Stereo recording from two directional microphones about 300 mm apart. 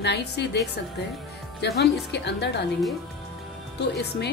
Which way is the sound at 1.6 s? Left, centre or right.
Left.